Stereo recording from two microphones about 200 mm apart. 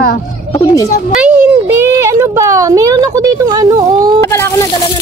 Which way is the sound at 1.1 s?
10° right (ahead or behind).